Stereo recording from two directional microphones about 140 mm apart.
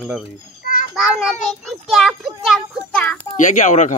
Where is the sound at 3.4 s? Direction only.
60° left (ahead or behind).